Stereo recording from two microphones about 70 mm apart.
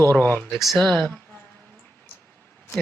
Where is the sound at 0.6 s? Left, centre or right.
Centre.